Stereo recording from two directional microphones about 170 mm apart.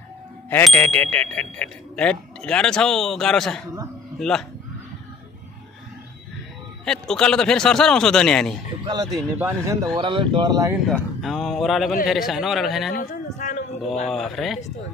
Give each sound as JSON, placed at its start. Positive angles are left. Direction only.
{"t": 0.7, "sound": "speech", "side_deg": 10}
{"t": 6.8, "sound": "speech", "side_deg": 5}
{"t": 8.8, "sound": "speech", "side_deg": -25}
{"t": 9.9, "sound": "speech", "side_deg": -30}
{"t": 10.9, "sound": "speech", "side_deg": 0}
{"t": 12.9, "sound": "a sound", "side_deg": 45}
{"t": 14.1, "sound": "speech", "side_deg": 0}